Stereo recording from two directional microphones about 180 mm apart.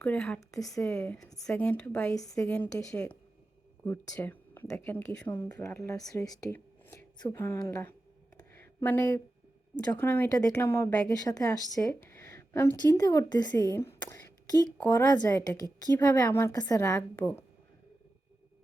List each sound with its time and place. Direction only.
0.0 s a woman's voice: 5° left (ahead or behind)
0.3 s a woman's voice: 20° left (ahead or behind)
0.9 s a woman's voice: 10° left (ahead or behind)
2.1 s a woman's voice: 20° left (ahead or behind)
8.4 s a sound: 10° left (ahead or behind)
10.0 s a woman's voice: 10° left (ahead or behind)